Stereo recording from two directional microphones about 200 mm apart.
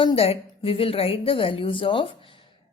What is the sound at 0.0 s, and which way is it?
A woman's voice, 25° left (ahead or behind).